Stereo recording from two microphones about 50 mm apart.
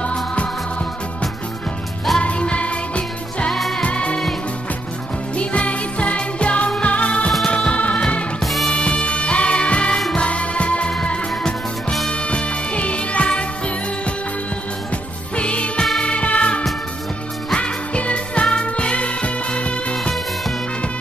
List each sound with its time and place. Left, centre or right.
0.0 s music: left
2.1 s music: centre
3.5 s music: centre
3.8 s music: left
5.3 s music: left
8.4 s music: centre
8.6 s music: centre
15.3 s music: left